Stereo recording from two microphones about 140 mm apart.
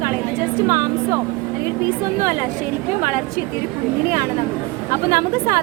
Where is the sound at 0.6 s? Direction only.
20° right (ahead or behind).